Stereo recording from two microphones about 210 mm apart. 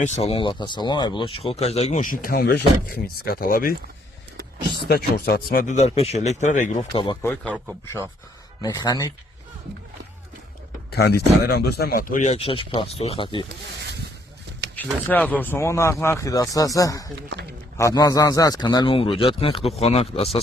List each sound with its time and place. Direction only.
0.0 s speech: 25° left (ahead or behind); by 3.8 s 45° left (ahead or behind)
4.9 s speech: 50° left (ahead or behind)
6.9 s speech: 20° left (ahead or behind)
7.3 s a man's voice: 5° left (ahead or behind)
8.6 s speech: 20° left (ahead or behind)
10.9 s speech: 50° left (ahead or behind); by 13.4 s 25° left (ahead or behind)
14.8 s speech: 10° left (ahead or behind); by 20.4 s 30° left (ahead or behind)